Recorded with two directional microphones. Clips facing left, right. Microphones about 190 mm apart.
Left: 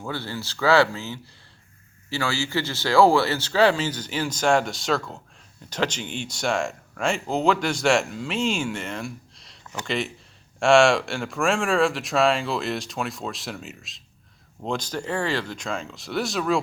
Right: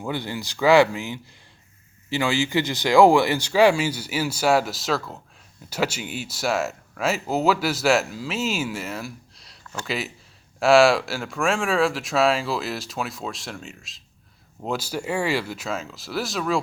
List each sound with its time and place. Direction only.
0.0 s speech: 15° right (ahead or behind); by 16.6 s centre (ahead or behind)